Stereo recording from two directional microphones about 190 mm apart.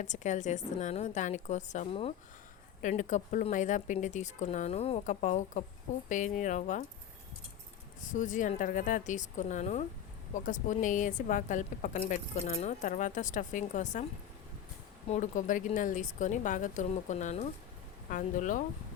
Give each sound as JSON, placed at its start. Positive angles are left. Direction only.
{"t": 0.0, "sound": "a woman's voice", "side_deg": 40}
{"t": 2.8, "sound": "a woman's voice", "side_deg": 40}
{"t": 8.0, "sound": "a woman's voice", "side_deg": 40}
{"t": 15.1, "sound": "a woman's voice", "side_deg": 40}